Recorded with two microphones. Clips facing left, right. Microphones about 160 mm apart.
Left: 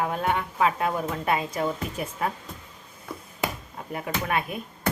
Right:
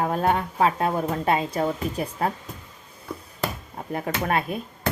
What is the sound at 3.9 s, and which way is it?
Speech, 40° right (ahead or behind).